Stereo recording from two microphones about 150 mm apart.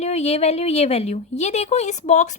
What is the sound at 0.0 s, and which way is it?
A woman's voice, 45° left (ahead or behind).